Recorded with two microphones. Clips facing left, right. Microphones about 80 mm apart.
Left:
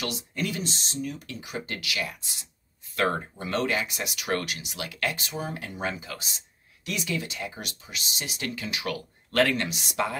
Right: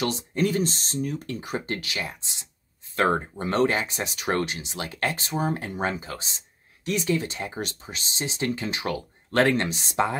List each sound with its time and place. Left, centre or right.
0.0 s speech: right